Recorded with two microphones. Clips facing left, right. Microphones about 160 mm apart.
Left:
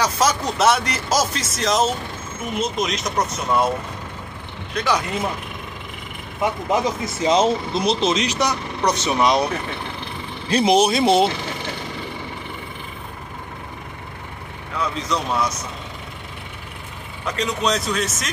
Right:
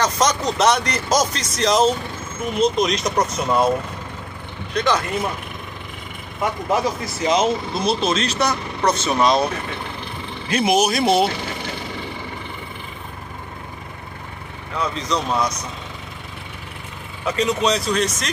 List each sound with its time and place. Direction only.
0.0 s speech: 5° left (ahead or behind)
4.7 s speech: 10° left (ahead or behind)
6.4 s speech: 20° left (ahead or behind)
10.5 s speech: 30° left (ahead or behind)
14.8 s speech: 5° left (ahead or behind)
17.3 s speech: centre (ahead or behind)